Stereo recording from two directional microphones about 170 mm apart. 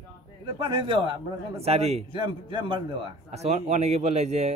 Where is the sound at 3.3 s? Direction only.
40° right (ahead or behind).